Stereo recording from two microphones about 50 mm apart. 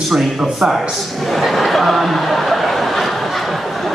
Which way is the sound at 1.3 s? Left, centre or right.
Centre.